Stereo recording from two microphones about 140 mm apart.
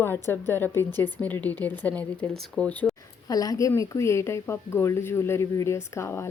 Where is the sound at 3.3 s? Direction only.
25° left (ahead or behind).